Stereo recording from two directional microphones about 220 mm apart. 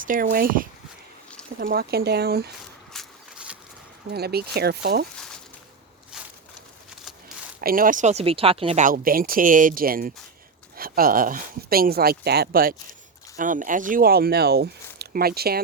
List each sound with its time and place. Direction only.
0.0 s speech: 40° right (ahead or behind)
2.9 s a sound: centre (ahead or behind)
4.1 s speech: 45° right (ahead or behind)
7.6 s speech: 40° right (ahead or behind)